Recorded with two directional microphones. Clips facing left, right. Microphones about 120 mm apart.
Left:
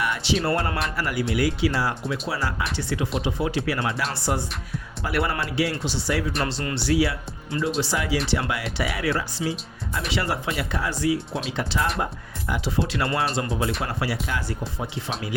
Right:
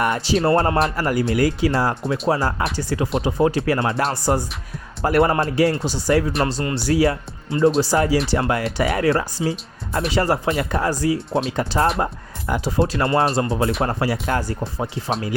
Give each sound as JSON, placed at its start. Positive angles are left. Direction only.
{"t": 0.0, "sound": "speech", "side_deg": -45}